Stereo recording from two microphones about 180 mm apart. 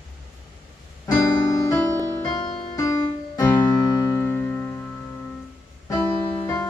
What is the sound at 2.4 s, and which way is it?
Piano, 20° left (ahead or behind).